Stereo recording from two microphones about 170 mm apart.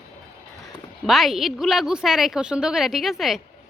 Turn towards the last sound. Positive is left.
turn(degrees=0)  # may be behind; listen again after turning